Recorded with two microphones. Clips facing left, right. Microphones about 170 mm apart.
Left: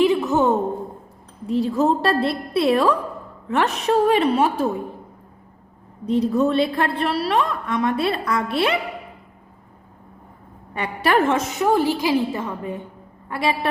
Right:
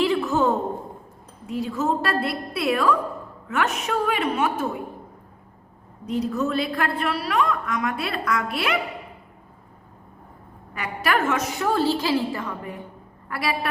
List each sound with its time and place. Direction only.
0.0 s a sound: 20° left (ahead or behind)
1.5 s a woman's voice: 35° left (ahead or behind)
6.1 s a woman's voice: 30° left (ahead or behind)
10.8 s a woman's voice: 30° left (ahead or behind)